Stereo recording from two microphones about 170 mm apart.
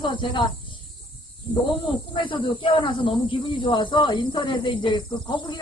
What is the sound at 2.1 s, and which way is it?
Speech, 30° left (ahead or behind).